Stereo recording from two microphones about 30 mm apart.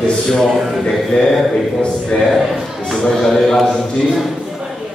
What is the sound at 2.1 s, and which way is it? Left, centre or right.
Speech, left.